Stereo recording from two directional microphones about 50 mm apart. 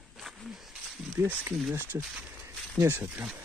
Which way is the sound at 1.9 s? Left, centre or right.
Right.